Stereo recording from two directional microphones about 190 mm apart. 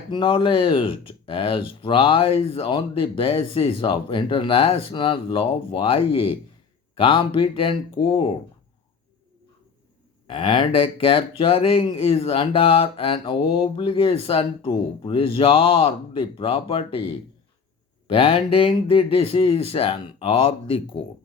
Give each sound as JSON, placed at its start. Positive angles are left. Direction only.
{"t": 0.1, "sound": "speech", "side_deg": 25}
{"t": 10.2, "sound": "speech", "side_deg": 25}